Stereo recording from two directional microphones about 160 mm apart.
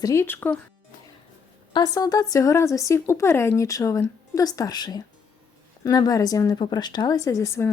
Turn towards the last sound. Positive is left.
turn(degrees=20)  # may be behind; listen again after turning